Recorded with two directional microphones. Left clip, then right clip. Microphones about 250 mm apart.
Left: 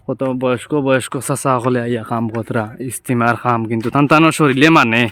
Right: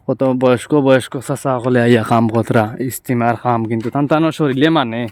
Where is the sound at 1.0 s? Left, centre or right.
Centre.